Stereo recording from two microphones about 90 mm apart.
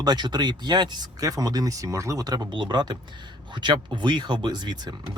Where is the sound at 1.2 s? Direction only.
40° right (ahead or behind).